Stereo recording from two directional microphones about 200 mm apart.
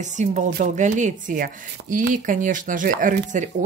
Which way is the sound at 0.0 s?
35° right (ahead or behind).